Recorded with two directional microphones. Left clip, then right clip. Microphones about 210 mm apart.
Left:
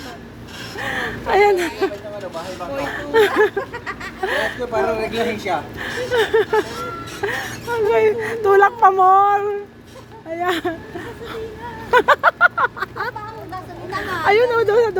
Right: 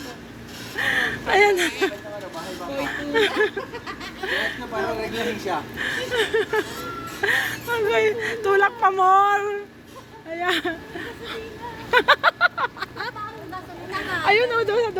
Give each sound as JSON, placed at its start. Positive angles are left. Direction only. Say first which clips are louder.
{"t": 0.8, "sound": "speech", "louder": "right 2 dB", "side_deg": 10}
{"t": 2.8, "sound": "speech", "louder": "left 6 dB", "side_deg": 20}
{"t": 7.2, "sound": "speech", "louder": "right 3 dB", "side_deg": 5}
{"t": 11.9, "sound": "speech", "louder": "left 3 dB", "side_deg": 20}
{"t": 14.3, "sound": "speech", "louder": "left 4 dB", "side_deg": 20}